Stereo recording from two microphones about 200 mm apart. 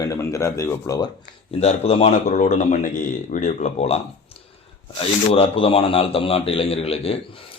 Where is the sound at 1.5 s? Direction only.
30° left (ahead or behind).